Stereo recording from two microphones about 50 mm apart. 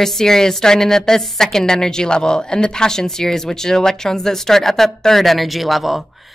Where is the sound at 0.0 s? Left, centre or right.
Centre.